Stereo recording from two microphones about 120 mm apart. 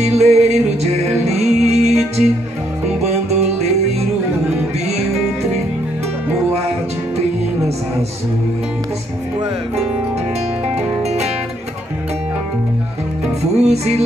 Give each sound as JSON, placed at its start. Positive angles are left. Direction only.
{"t": 0.0, "sound": "music", "side_deg": -65}
{"t": 1.9, "sound": "music", "side_deg": 0}
{"t": 3.3, "sound": "music", "side_deg": -65}
{"t": 13.6, "sound": "music", "side_deg": -65}